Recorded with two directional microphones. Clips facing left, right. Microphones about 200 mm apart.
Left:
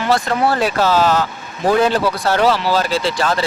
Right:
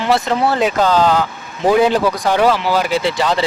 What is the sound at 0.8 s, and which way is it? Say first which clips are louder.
Speech: right 1 dB; 5° left (ahead or behind).